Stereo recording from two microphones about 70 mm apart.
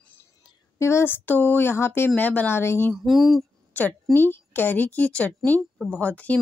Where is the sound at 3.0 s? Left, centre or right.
Centre.